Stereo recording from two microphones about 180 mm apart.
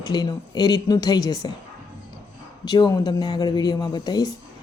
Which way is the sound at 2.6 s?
20° left (ahead or behind).